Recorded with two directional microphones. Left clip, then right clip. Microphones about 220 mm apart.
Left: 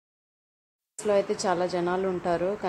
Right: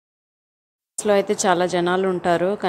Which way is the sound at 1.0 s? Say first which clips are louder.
Right 6 dB; 20° right (ahead or behind).